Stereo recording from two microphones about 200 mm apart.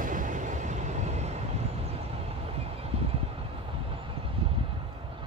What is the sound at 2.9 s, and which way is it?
Vehicle, 30° right (ahead or behind).